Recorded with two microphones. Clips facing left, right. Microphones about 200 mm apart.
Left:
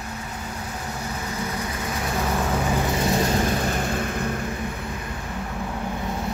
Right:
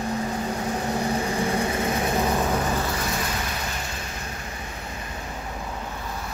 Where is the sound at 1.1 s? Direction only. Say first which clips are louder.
Right 6 dB; 30° right (ahead or behind).